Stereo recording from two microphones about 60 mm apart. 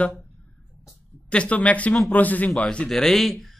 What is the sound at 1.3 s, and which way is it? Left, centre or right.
Speech, left.